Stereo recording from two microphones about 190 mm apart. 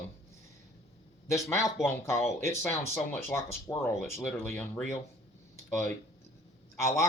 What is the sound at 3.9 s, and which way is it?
Speech, centre (ahead or behind).